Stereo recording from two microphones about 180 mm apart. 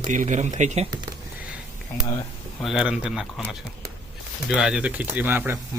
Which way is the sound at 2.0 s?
20° left (ahead or behind).